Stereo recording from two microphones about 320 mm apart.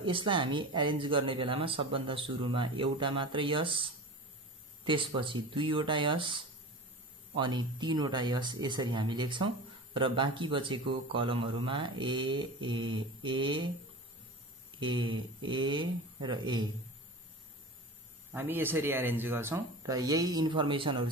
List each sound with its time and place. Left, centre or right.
0.0 s speech: centre
14.8 s speech: centre
18.3 s speech: centre